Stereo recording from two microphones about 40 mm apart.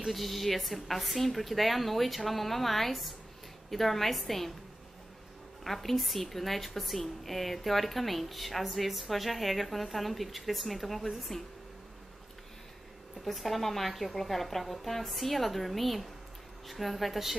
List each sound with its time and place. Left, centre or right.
0.1 s a woman's voice: centre
5.6 s a woman's voice: centre
13.2 s a woman's voice: centre